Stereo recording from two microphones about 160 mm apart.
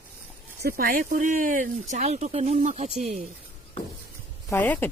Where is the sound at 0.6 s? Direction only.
70° right (ahead or behind); by 3.2 s 45° right (ahead or behind).